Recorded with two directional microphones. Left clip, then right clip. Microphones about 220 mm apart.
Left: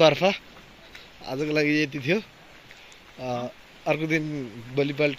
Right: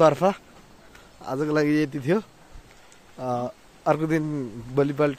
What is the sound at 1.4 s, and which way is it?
Speech, 20° right (ahead or behind).